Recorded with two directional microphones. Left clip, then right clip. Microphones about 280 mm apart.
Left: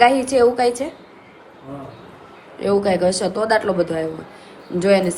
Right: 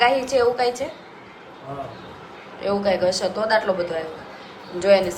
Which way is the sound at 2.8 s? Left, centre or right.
Left.